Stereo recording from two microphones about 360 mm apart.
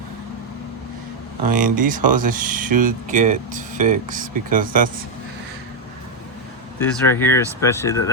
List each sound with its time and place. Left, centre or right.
1.5 s speech: right
7.1 s speech: centre